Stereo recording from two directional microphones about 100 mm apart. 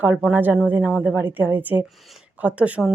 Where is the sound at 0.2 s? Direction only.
15° right (ahead or behind).